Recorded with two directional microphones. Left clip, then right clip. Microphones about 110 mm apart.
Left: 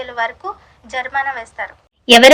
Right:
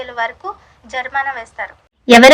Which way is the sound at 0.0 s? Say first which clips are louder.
Even; 30° left (ahead or behind).